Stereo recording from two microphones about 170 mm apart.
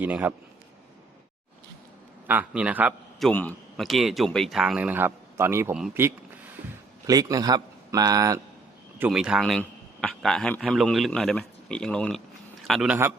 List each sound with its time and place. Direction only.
0.0 s speech: 10° right (ahead or behind)
2.2 s a man's voice: 10° right (ahead or behind)
3.2 s a man's voice: 5° left (ahead or behind); by 8.4 s 20° right (ahead or behind)
9.0 s a man's voice: 5° right (ahead or behind)